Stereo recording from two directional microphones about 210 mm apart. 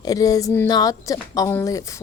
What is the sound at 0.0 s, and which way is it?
A woman's voice, 15° left (ahead or behind).